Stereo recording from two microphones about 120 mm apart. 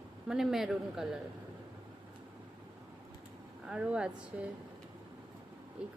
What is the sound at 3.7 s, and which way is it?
Speech, 10° right (ahead or behind).